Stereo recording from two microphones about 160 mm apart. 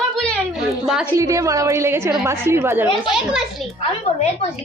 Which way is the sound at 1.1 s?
20° right (ahead or behind).